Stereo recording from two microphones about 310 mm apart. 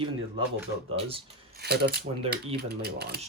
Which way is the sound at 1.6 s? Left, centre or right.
Right.